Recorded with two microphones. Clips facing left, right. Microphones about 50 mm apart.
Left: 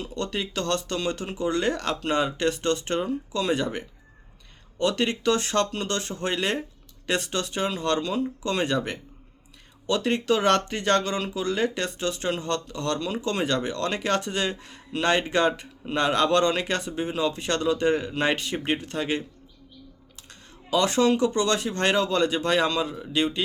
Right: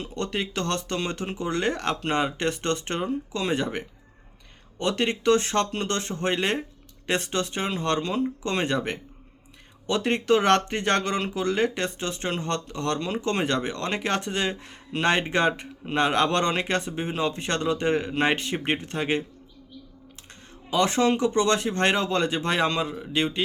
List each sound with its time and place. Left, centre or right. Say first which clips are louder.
0.0 s speech: right 1 dB; right
20.7 s speech: left 1 dB; right